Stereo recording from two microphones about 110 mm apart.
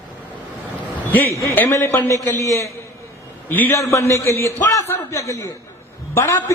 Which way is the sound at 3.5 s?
20° left (ahead or behind).